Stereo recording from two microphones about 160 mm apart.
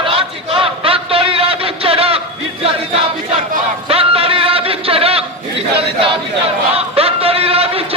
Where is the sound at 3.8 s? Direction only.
35° right (ahead or behind).